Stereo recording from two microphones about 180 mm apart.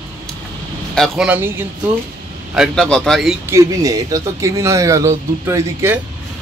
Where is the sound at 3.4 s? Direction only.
15° right (ahead or behind).